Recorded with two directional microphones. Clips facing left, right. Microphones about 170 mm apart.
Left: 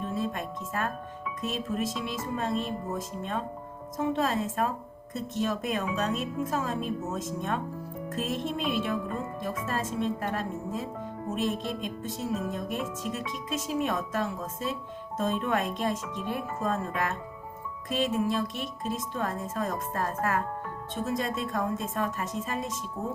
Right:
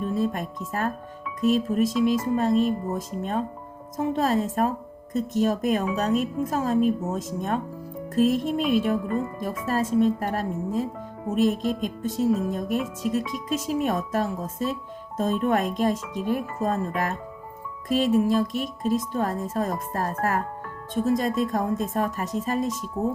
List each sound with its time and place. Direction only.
0.2 s a woman's voice: 40° right (ahead or behind)
12.0 s a woman's voice: 40° right (ahead or behind)